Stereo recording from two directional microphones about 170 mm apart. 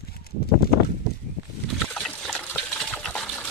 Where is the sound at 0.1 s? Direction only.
65° left (ahead or behind).